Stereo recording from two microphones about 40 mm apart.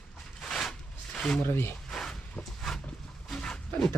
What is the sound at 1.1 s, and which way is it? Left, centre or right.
Speech, centre.